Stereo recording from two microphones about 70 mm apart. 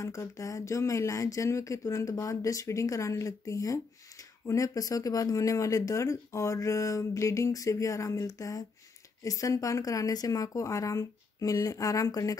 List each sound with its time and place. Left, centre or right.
0.0 s speech: left